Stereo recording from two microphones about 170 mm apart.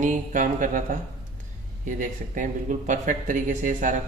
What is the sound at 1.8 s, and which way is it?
Speech, 50° right (ahead or behind).